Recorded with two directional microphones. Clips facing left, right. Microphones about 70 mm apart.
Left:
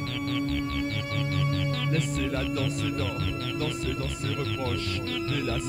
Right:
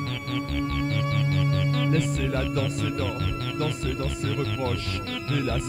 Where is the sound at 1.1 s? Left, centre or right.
Right.